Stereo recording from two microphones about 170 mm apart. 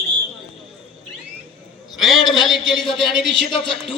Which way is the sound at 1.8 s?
Centre (ahead or behind).